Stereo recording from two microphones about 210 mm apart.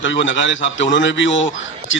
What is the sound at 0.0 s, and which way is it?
A man's voice, 60° left (ahead or behind).